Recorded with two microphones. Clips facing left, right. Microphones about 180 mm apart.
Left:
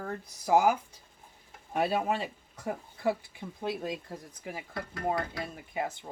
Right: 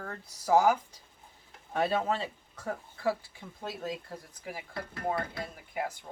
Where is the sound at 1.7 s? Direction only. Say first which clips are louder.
Even; 10° left (ahead or behind).